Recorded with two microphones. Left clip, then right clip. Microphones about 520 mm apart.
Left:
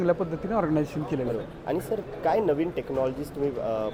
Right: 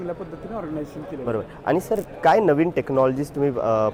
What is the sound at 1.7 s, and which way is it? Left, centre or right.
Speech, right.